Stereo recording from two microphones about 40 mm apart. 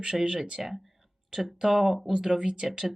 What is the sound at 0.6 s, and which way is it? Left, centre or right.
Speech, centre.